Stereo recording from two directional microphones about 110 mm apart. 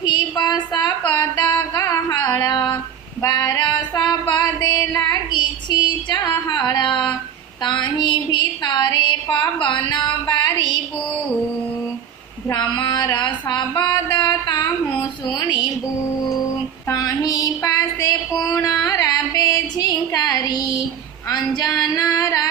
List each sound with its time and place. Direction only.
0.0 s a sound: 40° left (ahead or behind)
1.7 s music: 30° left (ahead or behind)
3.2 s female singing: 35° left (ahead or behind)
6.5 s a sound: 40° left (ahead or behind)
9.6 s music: 45° left (ahead or behind)
12.5 s a sound: 35° left (ahead or behind)
15.3 s music: 45° left (ahead or behind)
16.9 s female singing: 35° left (ahead or behind)
18.8 s music: 30° left (ahead or behind)
21.2 s female singing: 35° left (ahead or behind)